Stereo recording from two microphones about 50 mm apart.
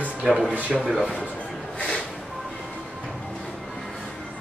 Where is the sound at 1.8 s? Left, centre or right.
Left.